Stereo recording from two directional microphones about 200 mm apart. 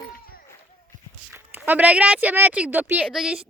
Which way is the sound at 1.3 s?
10° right (ahead or behind).